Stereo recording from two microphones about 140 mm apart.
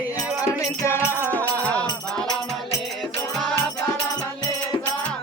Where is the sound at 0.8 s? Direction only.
15° left (ahead or behind).